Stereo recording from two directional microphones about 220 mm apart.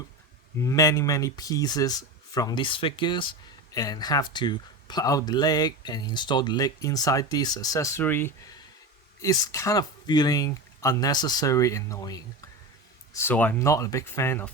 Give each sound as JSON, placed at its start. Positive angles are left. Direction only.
{"t": 0.6, "sound": "speech", "side_deg": 15}